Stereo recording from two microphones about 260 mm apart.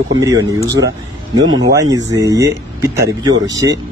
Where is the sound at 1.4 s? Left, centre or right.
Right.